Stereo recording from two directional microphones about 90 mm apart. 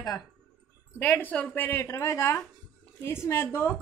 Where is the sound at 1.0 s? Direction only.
20° left (ahead or behind).